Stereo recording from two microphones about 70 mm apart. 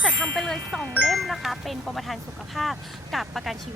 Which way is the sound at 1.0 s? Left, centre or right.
Centre.